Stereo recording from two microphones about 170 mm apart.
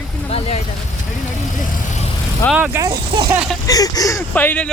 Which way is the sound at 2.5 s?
10° right (ahead or behind).